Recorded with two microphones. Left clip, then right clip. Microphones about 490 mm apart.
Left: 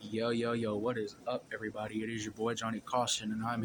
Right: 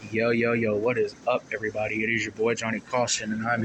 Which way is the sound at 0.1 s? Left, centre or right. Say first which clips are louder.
Right 10 dB; left.